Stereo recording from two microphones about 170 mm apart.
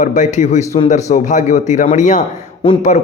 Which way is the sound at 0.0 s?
45° left (ahead or behind).